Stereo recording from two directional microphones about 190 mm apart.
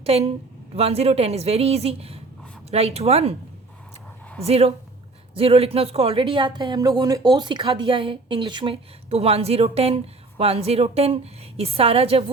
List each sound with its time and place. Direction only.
0.0 s a woman's voice: 30° right (ahead or behind)
4.4 s a woman's voice: 30° right (ahead or behind)